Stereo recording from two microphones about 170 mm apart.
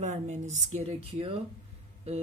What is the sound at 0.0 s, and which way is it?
Speech, 45° right (ahead or behind).